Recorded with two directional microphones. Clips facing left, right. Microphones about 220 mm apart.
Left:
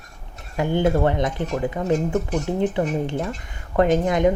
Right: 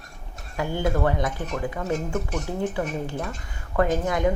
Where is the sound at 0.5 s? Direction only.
25° left (ahead or behind).